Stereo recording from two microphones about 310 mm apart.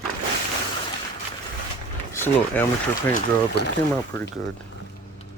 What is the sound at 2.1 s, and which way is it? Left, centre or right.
Speech, centre.